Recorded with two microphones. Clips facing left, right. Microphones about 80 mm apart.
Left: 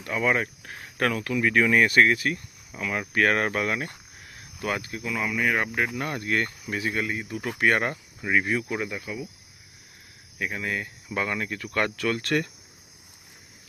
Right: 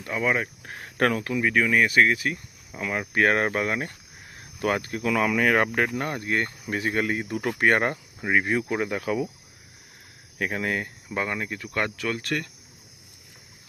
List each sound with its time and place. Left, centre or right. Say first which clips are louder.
0.1 s speech: left 1 dB; centre
0.6 s a sound: right 3 dB; right
1.3 s speech: left 1 dB; centre
1.6 s speech: left 1 dB; centre; by 3.8 s right
4.8 s speech: right 4 dB; right
5.0 s speech: right 5 dB; right
5.7 s speech: right 2 dB; right
6.1 s speech: even; right
6.7 s speech: right 3 dB; right
7.6 s cricket: right 1 dB; right
9.0 s speech: right 8 dB; right
10.3 s speech: right 3 dB; right
11.1 s speech: even; right